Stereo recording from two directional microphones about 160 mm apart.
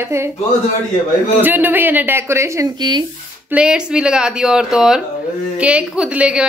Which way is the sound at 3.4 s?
5° right (ahead or behind).